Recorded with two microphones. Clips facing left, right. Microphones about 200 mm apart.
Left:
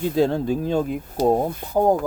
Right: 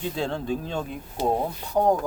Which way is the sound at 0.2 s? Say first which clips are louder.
Left 9 dB; 40° left (ahead or behind).